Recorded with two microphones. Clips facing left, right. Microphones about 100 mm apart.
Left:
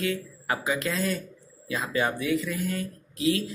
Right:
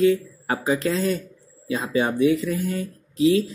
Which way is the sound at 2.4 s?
35° right (ahead or behind).